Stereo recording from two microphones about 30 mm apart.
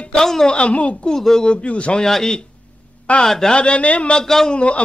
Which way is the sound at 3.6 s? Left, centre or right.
Left.